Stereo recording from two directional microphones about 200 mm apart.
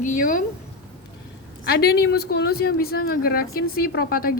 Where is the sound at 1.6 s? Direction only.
55° left (ahead or behind).